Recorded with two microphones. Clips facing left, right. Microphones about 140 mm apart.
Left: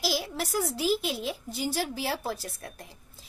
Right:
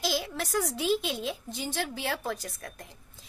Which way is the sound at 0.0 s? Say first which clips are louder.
Even; 5° left (ahead or behind).